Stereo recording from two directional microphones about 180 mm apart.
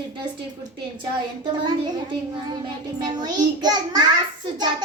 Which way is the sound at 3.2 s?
20° right (ahead or behind).